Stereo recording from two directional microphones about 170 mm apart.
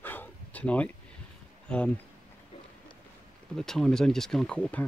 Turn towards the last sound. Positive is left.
turn(degrees=10)  # may be behind; listen again after turning